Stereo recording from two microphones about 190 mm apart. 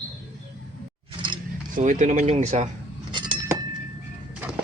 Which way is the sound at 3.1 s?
25° right (ahead or behind).